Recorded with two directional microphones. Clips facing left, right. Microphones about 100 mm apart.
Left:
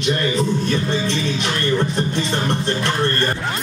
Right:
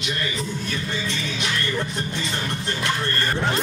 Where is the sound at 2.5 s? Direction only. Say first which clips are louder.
Left 5 dB; 30° left (ahead or behind).